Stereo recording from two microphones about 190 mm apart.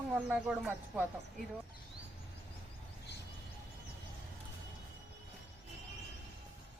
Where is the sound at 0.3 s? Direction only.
5° right (ahead or behind).